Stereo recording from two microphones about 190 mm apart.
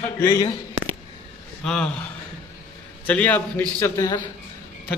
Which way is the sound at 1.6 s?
5° left (ahead or behind).